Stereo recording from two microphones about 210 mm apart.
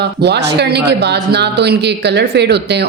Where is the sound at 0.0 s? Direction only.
50° right (ahead or behind).